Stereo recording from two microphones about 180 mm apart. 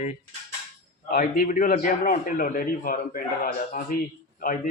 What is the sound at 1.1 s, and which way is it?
A man's voice, 50° left (ahead or behind).